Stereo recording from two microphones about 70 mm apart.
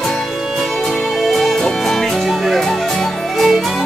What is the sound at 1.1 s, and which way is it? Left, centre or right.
Music, centre.